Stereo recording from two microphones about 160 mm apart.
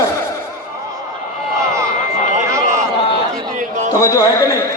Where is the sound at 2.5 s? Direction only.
20° right (ahead or behind).